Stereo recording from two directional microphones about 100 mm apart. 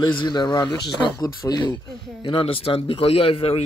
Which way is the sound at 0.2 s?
50° left (ahead or behind).